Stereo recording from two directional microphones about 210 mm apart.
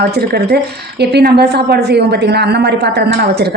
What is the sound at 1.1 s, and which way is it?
A woman's voice, 50° right (ahead or behind).